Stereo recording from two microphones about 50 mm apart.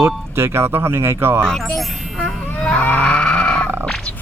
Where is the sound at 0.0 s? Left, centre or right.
Right.